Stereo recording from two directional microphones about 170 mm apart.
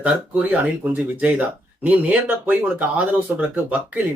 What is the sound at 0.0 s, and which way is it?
Speech, 10° right (ahead or behind).